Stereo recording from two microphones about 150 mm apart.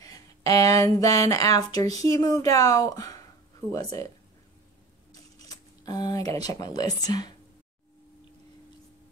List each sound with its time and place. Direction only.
0.0 s a woman's voice: 25° left (ahead or behind)
5.5 s speech: 25° left (ahead or behind)